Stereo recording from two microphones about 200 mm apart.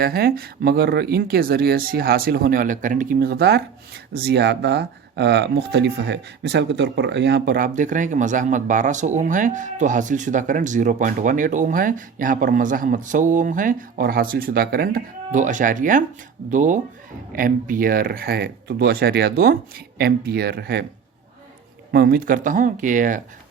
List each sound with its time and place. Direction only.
0.0 s speech: 50° right (ahead or behind)
21.9 s speech: 50° right (ahead or behind)